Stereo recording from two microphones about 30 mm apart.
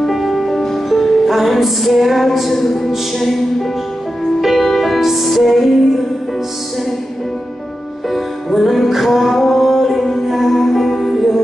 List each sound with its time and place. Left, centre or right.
0.0 s music: centre
4.6 s music: centre
8.1 s music: centre